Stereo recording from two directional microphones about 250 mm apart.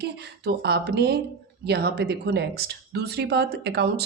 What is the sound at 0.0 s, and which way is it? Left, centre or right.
Speech, right.